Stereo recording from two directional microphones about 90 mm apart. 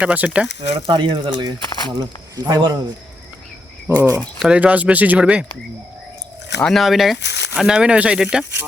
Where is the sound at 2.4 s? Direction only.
45° right (ahead or behind).